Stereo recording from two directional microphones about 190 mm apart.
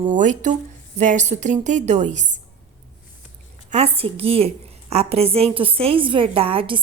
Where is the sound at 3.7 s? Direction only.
30° right (ahead or behind).